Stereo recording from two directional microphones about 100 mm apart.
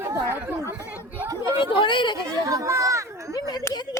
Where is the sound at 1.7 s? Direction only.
55° left (ahead or behind).